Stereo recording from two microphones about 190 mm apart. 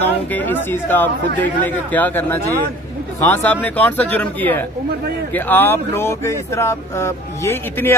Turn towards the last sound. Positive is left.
turn(degrees=15)  # may be behind; listen again after turning